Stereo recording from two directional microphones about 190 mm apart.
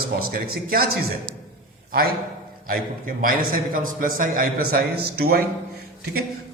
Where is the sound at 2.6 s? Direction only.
50° right (ahead or behind).